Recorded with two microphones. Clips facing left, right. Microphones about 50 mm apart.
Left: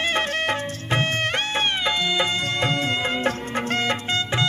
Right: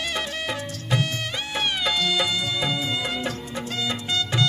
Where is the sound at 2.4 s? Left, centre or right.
Left.